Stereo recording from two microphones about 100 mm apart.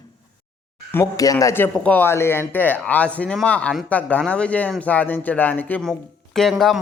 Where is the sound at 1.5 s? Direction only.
20° left (ahead or behind).